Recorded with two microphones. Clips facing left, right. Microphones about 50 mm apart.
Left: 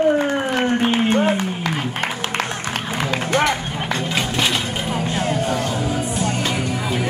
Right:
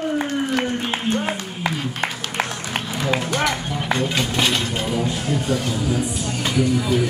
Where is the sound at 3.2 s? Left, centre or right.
Left.